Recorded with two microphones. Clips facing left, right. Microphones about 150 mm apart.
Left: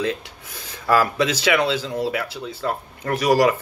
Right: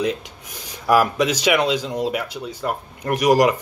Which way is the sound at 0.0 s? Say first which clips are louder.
Right 2 dB; 15° right (ahead or behind).